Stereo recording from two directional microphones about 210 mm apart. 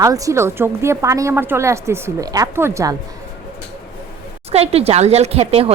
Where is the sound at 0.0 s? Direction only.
15° right (ahead or behind).